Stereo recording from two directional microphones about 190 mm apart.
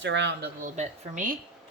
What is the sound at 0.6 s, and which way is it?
Speech, 45° right (ahead or behind).